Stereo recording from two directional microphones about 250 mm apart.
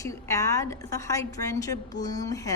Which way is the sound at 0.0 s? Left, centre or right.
Centre.